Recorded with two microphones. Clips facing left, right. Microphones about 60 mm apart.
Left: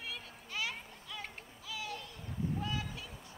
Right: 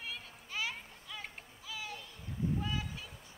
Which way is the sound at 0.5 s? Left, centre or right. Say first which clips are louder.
Even; centre.